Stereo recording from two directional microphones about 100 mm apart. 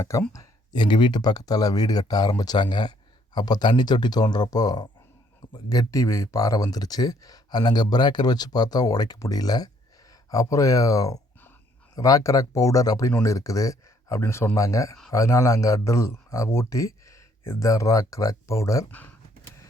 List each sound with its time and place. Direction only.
0.0 s speech: 30° left (ahead or behind)
0.8 s speech: 50° left (ahead or behind); by 18.9 s 30° left (ahead or behind)
18.9 s speech: 15° left (ahead or behind)